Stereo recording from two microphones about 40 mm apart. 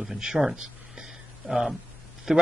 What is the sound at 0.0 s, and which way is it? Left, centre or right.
Speech, centre.